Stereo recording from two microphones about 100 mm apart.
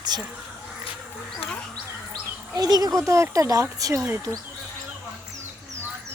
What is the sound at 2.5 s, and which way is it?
Speech, 40° right (ahead or behind).